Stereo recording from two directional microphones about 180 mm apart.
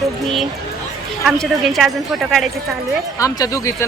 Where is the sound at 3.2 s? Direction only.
20° left (ahead or behind).